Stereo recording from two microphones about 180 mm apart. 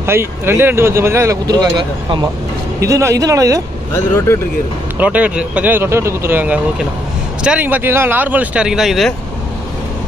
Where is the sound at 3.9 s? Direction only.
15° left (ahead or behind).